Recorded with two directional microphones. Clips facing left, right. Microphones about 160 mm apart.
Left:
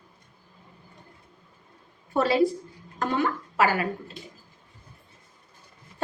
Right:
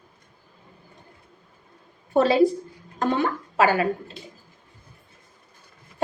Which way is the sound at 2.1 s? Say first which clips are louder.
Right 4 dB; 20° right (ahead or behind).